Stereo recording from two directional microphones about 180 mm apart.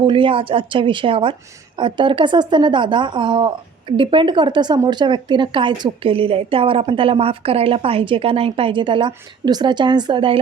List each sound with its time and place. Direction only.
0.0 s speech: 30° right (ahead or behind)